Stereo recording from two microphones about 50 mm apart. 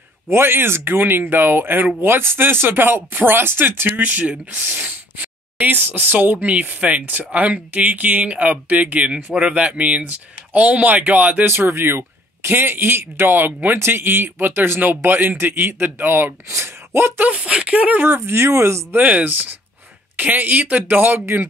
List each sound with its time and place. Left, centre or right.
0.3 s a man's voice: right
4.0 s speech: right
6.1 s speech: right
11.4 s a man's voice: right
16.4 s speech: right
17.2 s speech: right
18.0 s speech: right
18.9 s speech: right